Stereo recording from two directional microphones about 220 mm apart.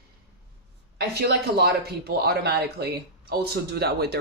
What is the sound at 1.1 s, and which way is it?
Speech, 45° right (ahead or behind).